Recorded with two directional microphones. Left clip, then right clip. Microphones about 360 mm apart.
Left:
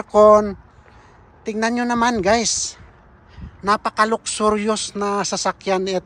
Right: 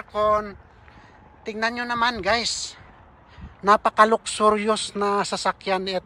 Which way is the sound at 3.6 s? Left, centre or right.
Centre.